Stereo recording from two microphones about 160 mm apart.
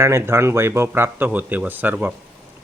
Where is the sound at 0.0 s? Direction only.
15° right (ahead or behind).